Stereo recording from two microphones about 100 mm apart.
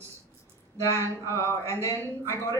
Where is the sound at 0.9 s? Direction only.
30° right (ahead or behind).